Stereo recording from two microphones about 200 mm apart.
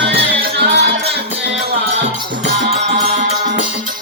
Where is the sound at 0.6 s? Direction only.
55° right (ahead or behind).